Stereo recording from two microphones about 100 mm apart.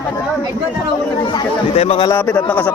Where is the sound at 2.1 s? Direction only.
15° left (ahead or behind).